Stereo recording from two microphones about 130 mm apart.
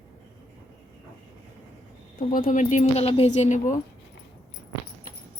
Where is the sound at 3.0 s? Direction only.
55° left (ahead or behind).